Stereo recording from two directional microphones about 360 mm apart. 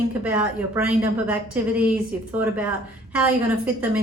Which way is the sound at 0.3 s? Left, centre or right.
Centre.